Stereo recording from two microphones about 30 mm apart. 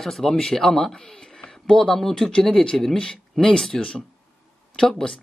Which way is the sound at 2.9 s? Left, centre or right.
Left.